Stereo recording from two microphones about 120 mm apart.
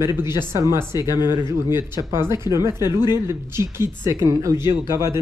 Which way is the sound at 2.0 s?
20° right (ahead or behind).